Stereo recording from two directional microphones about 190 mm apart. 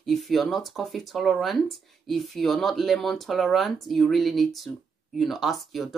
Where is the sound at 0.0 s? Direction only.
Centre (ahead or behind).